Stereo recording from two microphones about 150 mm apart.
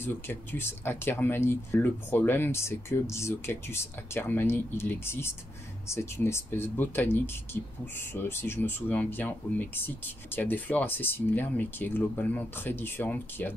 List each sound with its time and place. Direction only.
0.0 s speech: 15° left (ahead or behind)